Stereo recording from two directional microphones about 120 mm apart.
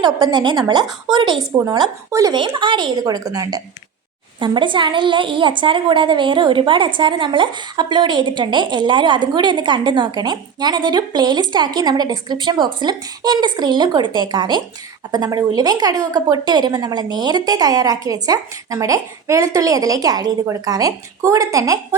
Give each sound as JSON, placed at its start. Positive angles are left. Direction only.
{"t": 0.0, "sound": "a woman's voice", "side_deg": -35}
{"t": 1.5, "sound": "speech", "side_deg": -25}
{"t": 2.3, "sound": "a woman's voice", "side_deg": -40}
{"t": 4.4, "sound": "a woman's voice", "side_deg": -40}